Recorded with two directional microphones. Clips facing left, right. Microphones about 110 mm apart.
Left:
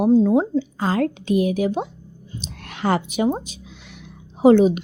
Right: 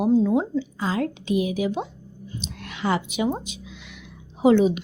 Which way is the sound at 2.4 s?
45° left (ahead or behind).